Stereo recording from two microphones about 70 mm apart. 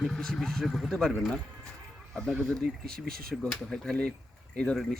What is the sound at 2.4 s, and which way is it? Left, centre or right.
Speech, centre.